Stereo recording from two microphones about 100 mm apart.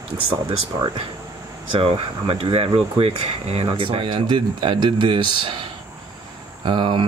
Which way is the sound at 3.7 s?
60° right (ahead or behind).